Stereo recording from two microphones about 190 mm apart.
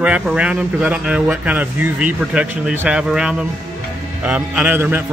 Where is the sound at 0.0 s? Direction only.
5° right (ahead or behind).